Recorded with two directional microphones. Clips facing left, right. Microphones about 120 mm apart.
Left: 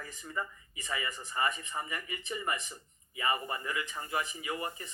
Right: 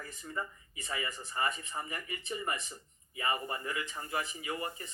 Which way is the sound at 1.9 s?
35° right (ahead or behind).